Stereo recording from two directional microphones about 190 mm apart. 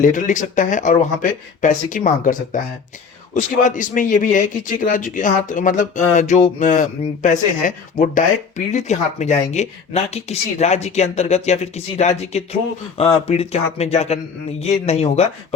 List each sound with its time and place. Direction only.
0.0 s speech: 40° left (ahead or behind)